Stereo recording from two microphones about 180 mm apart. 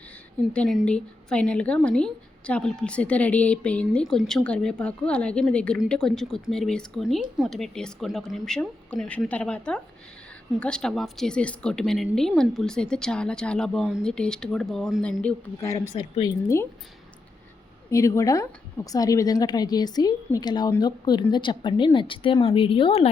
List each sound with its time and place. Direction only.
0.5 s a woman's voice: 5° left (ahead or behind); by 16.6 s 20° left (ahead or behind)
17.9 s a woman's voice: 15° left (ahead or behind)